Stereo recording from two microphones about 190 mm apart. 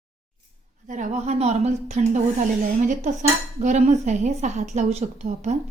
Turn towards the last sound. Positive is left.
turn(degrees=-40)  # may be behind; listen again after turning